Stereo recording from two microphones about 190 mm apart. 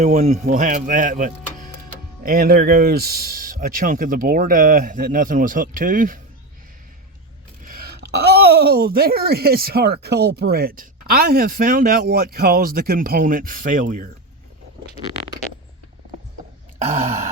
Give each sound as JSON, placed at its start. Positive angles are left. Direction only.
{"t": 0.0, "sound": "speech", "side_deg": -35}
{"t": 7.6, "sound": "speech", "side_deg": -50}
{"t": 16.7, "sound": "a sound", "side_deg": -40}